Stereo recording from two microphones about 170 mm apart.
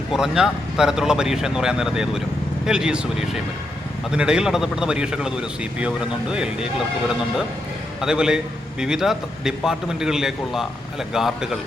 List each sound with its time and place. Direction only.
0.1 s a man's voice: 5° right (ahead or behind)
8.0 s a man's voice: 5° right (ahead or behind)